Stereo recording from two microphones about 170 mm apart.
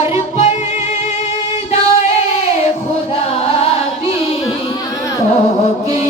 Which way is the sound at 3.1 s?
35° left (ahead or behind).